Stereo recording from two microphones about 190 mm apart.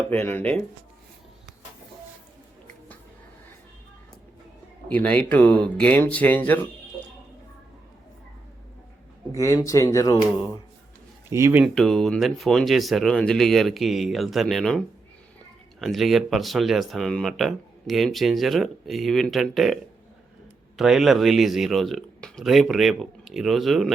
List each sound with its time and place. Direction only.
0.1 s speech: 10° left (ahead or behind)
4.9 s speech: 5° left (ahead or behind)
9.3 s speech: 15° left (ahead or behind)
11.3 s speech: 15° right (ahead or behind)
11.6 s speech: centre (ahead or behind)